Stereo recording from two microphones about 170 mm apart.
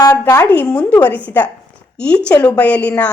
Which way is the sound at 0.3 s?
20° left (ahead or behind).